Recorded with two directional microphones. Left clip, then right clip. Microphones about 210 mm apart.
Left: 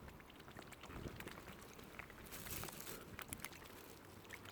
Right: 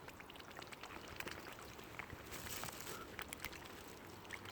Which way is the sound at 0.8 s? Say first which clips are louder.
Right 2 dB; 15° right (ahead or behind).